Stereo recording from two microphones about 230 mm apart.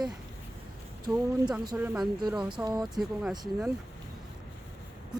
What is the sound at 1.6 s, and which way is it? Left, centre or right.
Speech, centre.